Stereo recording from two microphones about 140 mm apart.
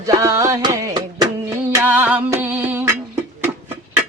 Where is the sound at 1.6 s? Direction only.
15° right (ahead or behind).